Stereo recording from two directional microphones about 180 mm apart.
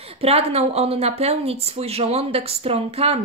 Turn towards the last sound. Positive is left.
turn(degrees=-35)  # may be behind; listen again after turning